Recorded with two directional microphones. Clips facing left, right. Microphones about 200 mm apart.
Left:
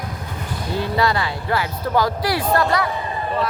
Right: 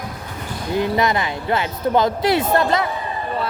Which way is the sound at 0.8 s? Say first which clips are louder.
Right 2 dB; 20° right (ahead or behind).